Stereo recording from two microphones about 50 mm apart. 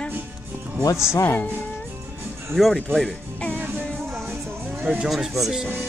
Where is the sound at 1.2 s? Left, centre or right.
Left.